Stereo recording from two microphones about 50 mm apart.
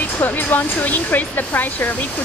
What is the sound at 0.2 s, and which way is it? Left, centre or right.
Speech, left.